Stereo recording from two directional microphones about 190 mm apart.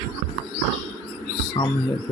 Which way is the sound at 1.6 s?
30° left (ahead or behind).